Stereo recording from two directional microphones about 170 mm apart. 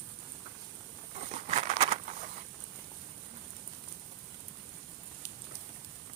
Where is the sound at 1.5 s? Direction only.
45° right (ahead or behind).